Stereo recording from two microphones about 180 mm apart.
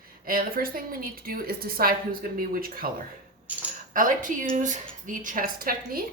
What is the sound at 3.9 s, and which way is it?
A woman's voice, 50° right (ahead or behind).